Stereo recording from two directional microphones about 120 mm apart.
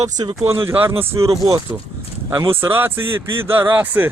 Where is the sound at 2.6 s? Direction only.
15° right (ahead or behind).